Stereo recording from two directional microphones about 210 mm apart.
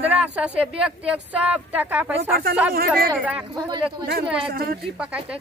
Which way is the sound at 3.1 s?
5° right (ahead or behind).